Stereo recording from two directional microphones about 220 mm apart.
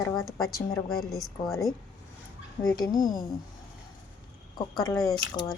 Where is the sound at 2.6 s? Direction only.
15° left (ahead or behind).